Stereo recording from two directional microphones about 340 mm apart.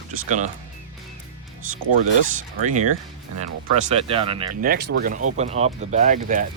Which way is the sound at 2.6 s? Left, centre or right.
Right.